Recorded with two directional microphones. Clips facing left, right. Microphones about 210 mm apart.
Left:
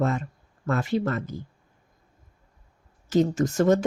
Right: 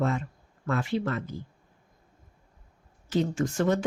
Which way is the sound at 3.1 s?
40° left (ahead or behind).